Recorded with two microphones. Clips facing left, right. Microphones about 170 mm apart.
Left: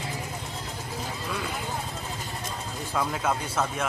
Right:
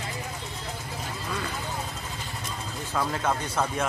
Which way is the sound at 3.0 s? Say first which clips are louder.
Even; centre (ahead or behind).